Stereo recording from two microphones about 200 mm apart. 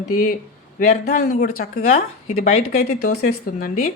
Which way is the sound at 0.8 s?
40° left (ahead or behind).